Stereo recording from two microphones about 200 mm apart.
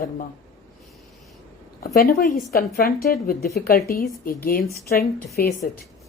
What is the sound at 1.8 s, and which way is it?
A woman's voice, 45° left (ahead or behind).